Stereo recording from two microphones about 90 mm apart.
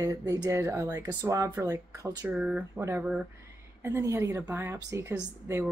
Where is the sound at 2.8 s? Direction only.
30° right (ahead or behind).